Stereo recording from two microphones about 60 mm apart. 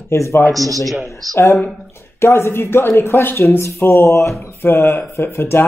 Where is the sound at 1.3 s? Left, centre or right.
Left.